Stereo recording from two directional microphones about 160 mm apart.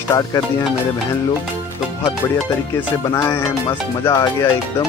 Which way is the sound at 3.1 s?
20° left (ahead or behind).